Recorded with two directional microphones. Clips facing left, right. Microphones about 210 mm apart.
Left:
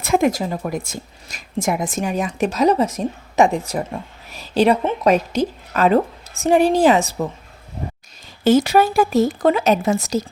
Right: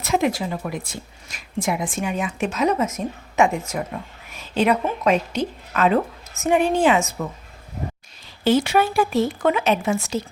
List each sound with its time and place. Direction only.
0.0 s speech: 50° left (ahead or behind)
8.4 s speech: 40° left (ahead or behind)